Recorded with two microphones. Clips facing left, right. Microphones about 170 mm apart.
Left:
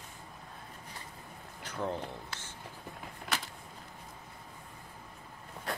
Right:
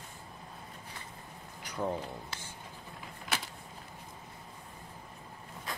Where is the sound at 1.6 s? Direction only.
15° right (ahead or behind).